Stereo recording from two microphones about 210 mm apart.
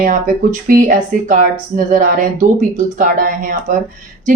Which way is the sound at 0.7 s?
40° right (ahead or behind).